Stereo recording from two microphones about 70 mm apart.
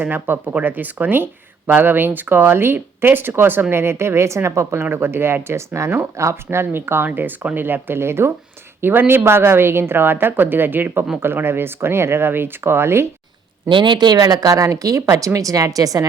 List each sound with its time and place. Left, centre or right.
0.0 s speech: right
13.9 s speech: right
14.2 s a woman's voice: right